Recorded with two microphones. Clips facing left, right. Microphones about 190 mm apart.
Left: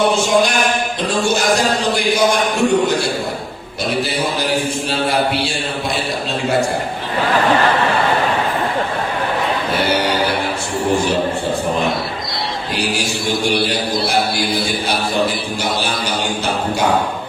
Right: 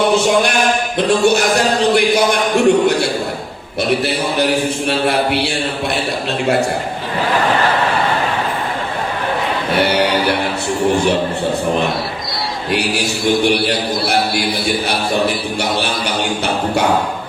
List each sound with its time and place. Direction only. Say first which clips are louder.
1.2 s mantra: right 3 dB; 60° right (ahead or behind)
9.8 s a sound: right 2 dB; 60° right (ahead or behind)
12.7 s mantra: right 3 dB; 60° right (ahead or behind)